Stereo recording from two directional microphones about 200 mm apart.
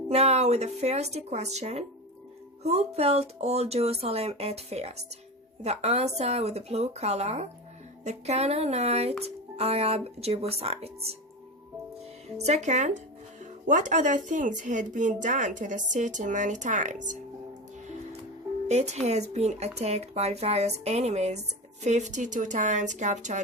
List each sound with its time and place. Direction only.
0.1 s speech: 30° right (ahead or behind)
12.4 s speech: 35° right (ahead or behind)
18.7 s speech: 35° right (ahead or behind)